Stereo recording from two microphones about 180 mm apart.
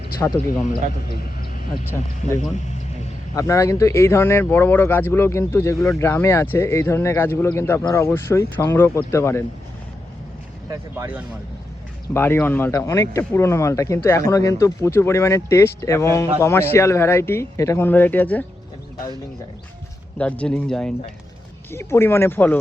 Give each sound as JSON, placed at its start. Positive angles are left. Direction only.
{"t": 0.2, "sound": "speech", "side_deg": 10}
{"t": 0.6, "sound": "a man's voice", "side_deg": 50}
{"t": 2.4, "sound": "a sound", "side_deg": 40}
{"t": 3.3, "sound": "speech", "side_deg": 15}
{"t": 10.7, "sound": "speech", "side_deg": -15}
{"t": 12.1, "sound": "speech", "side_deg": 10}
{"t": 20.1, "sound": "speech", "side_deg": 5}